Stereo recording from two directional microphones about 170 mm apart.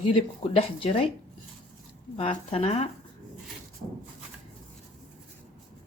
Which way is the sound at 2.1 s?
35° left (ahead or behind).